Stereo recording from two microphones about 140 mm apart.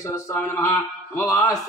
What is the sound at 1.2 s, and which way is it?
Speech, 25° left (ahead or behind).